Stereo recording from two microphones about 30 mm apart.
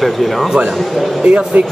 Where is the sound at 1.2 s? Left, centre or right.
Right.